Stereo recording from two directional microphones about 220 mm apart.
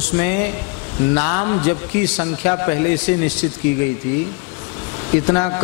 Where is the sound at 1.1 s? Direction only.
15° left (ahead or behind).